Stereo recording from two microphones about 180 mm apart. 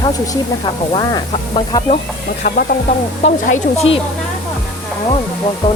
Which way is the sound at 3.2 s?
35° left (ahead or behind).